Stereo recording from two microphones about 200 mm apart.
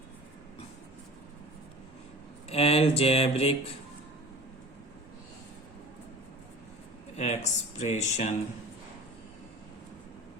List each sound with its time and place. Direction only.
2.5 s speech: 30° left (ahead or behind)
7.2 s speech: 35° left (ahead or behind)